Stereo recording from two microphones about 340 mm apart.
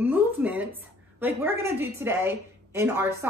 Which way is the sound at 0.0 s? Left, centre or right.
Centre.